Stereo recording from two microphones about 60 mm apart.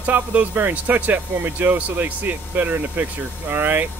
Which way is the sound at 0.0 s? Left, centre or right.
Right.